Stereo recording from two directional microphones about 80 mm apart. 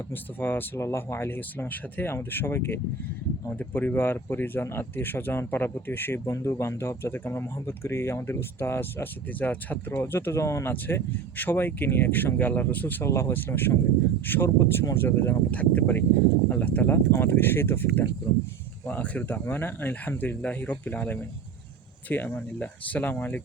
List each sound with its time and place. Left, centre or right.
0.3 s speech: left
0.8 s speech: left
1.4 s speech: left
13.1 s speech: left